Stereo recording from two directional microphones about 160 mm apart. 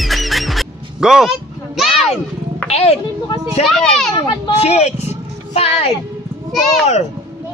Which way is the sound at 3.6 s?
Centre (ahead or behind).